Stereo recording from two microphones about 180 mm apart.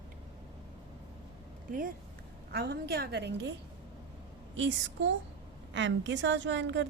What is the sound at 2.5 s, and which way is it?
Speech, 65° right (ahead or behind).